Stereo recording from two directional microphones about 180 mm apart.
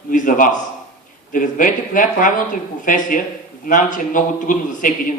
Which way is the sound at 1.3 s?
50° left (ahead or behind).